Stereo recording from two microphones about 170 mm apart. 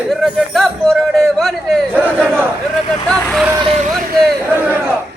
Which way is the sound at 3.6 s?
40° right (ahead or behind).